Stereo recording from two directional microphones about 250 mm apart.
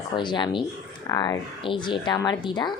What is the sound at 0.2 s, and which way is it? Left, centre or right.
Speech, centre.